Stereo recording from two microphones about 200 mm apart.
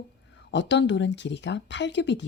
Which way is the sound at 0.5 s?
60° left (ahead or behind).